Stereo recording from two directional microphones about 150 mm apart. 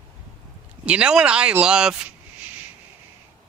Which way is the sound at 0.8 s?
5° right (ahead or behind).